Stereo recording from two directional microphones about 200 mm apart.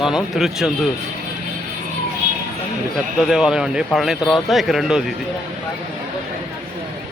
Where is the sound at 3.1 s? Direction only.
Centre (ahead or behind).